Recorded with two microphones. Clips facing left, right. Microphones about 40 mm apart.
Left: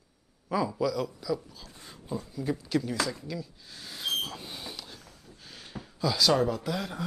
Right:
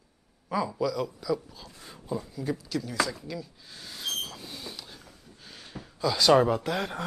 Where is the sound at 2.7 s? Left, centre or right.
Centre.